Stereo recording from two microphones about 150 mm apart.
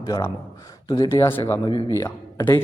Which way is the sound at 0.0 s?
20° left (ahead or behind).